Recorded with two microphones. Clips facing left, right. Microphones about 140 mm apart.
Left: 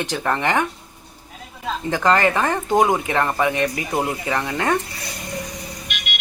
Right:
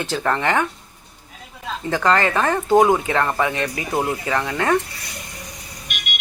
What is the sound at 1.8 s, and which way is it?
Speech, 20° left (ahead or behind).